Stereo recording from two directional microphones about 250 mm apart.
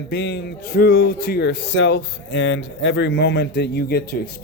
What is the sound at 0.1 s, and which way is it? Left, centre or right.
A man's voice, left.